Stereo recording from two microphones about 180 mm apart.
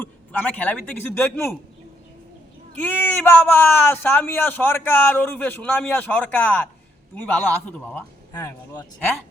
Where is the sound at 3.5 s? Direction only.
10° left (ahead or behind).